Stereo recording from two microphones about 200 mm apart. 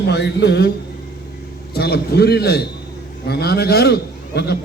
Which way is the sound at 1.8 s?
55° left (ahead or behind).